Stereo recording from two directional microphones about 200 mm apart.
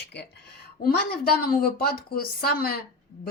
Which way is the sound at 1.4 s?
50° left (ahead or behind).